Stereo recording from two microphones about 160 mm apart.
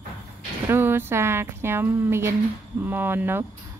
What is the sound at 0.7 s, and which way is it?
Speech, 15° right (ahead or behind).